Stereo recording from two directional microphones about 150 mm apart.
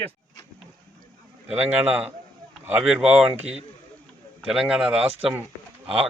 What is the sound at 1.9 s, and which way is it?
A man's voice, 10° right (ahead or behind).